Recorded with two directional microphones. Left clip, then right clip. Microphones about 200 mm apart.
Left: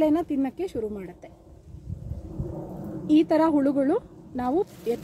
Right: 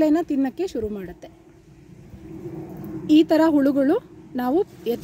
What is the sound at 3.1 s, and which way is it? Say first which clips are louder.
Speech: right 4 dB; 50° right (ahead or behind).